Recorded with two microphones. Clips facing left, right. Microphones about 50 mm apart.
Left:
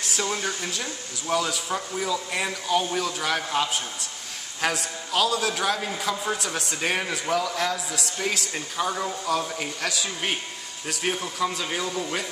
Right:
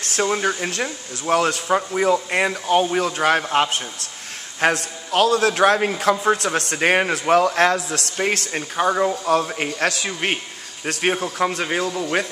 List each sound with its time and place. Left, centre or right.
0.0 s a sound: right
0.3 s a man's voice: right
8.2 s a man's voice: right
11.1 s a man's voice: right